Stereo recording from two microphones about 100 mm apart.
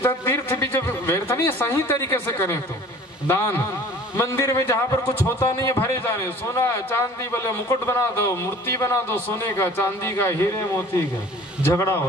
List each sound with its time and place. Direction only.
0.0 s a man's voice: 25° left (ahead or behind)